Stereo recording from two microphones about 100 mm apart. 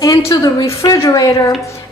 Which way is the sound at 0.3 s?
35° left (ahead or behind).